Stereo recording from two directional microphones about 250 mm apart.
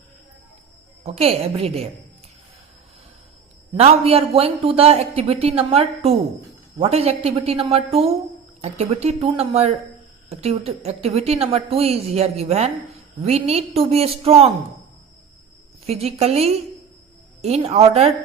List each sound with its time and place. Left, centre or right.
1.0 s a woman's voice: right
3.8 s a woman's voice: right
15.9 s a woman's voice: right